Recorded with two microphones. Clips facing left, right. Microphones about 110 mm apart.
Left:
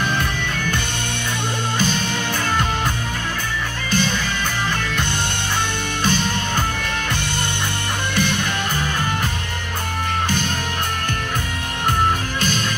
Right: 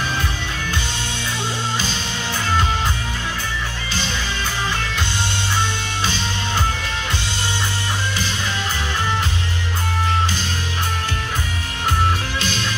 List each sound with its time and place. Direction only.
6.0 s music: 50° left (ahead or behind)